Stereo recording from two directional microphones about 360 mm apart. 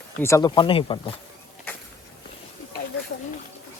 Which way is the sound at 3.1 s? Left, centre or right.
Left.